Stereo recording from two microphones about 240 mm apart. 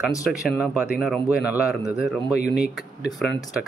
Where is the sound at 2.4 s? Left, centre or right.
Left.